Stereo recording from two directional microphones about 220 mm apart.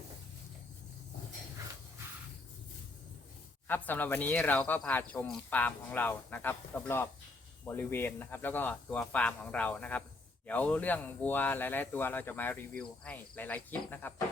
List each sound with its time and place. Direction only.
3.7 s speech: 10° left (ahead or behind)